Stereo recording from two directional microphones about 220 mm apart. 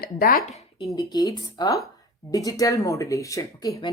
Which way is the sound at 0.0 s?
40° left (ahead or behind).